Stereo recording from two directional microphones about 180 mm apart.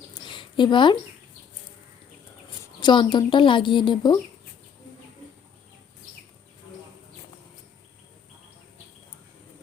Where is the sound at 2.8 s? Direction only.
25° left (ahead or behind).